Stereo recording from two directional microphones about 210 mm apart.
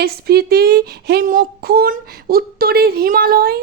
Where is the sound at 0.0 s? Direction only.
50° right (ahead or behind).